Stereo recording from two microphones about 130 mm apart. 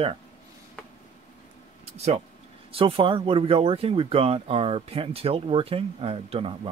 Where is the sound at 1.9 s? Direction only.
55° right (ahead or behind).